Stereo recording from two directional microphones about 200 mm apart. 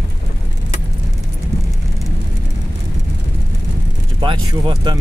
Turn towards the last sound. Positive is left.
turn(degrees=-20)  # may be behind; listen again after turning